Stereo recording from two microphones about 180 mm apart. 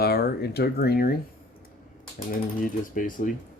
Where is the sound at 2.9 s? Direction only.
50° left (ahead or behind).